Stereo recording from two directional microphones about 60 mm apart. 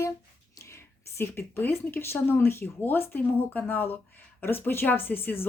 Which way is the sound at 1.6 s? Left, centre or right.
Left.